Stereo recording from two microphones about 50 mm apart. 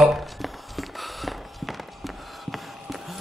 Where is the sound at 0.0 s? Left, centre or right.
Centre.